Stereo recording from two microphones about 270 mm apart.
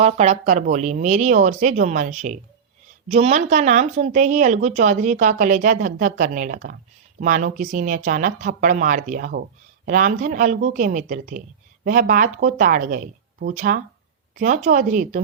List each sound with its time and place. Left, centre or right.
0.0 s a woman's voice: right